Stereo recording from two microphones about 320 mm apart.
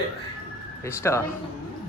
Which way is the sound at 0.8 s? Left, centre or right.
Centre.